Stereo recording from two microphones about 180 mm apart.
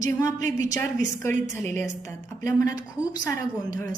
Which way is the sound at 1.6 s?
45° right (ahead or behind).